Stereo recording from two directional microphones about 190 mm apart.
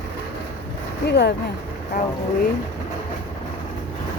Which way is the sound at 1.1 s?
60° left (ahead or behind).